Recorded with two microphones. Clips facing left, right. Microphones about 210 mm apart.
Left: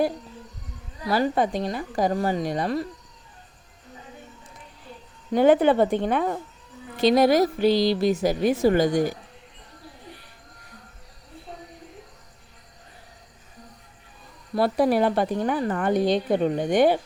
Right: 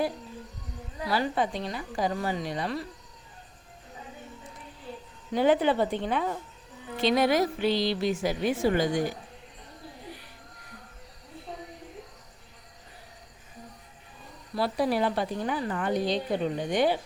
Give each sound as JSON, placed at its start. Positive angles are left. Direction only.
{"t": 1.1, "sound": "a woman's voice", "side_deg": 45}
{"t": 5.3, "sound": "a woman's voice", "side_deg": 50}
{"t": 6.9, "sound": "a woman's voice", "side_deg": 40}
{"t": 14.5, "sound": "a woman's voice", "side_deg": 50}